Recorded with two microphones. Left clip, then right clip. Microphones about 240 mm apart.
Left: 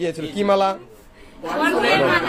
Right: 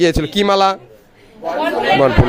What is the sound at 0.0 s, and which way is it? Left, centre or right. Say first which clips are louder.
Speech: right 8 dB; right.